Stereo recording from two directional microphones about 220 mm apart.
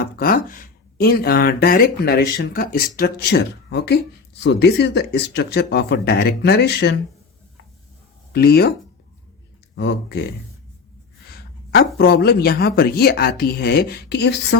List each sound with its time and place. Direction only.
0.0 s speech: 40° left (ahead or behind)
8.3 s speech: 45° left (ahead or behind)
9.7 s speech: 50° left (ahead or behind)
11.3 s speech: 45° left (ahead or behind)